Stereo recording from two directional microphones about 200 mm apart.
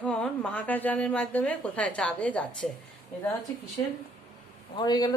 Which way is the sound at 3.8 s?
20° left (ahead or behind).